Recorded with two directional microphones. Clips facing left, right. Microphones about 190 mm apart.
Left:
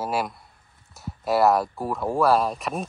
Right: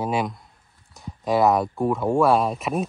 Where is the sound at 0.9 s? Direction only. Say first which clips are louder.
Right 1 dB; 5° left (ahead or behind).